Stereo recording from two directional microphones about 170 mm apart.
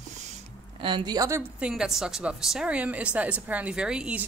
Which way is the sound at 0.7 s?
30° right (ahead or behind).